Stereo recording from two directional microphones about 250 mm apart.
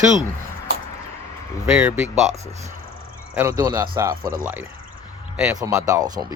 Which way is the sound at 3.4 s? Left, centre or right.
Centre.